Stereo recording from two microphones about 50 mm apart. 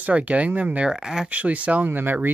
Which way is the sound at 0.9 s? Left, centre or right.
Centre.